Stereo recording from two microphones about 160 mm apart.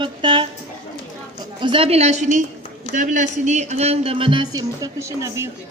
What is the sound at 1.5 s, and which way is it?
Speech, 30° right (ahead or behind).